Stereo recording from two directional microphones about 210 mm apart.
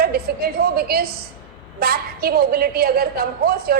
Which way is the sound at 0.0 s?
45° right (ahead or behind).